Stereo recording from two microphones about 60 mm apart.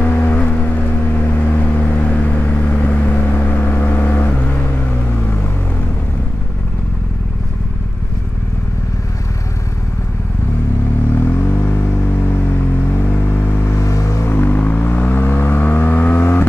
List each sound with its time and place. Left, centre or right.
0.0 s vehicle: left
11.1 s vehicle: left
13.7 s vehicle: left
14.2 s vehicle: left